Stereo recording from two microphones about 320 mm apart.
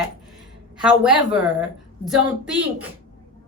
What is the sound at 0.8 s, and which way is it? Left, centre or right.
A woman's voice, centre.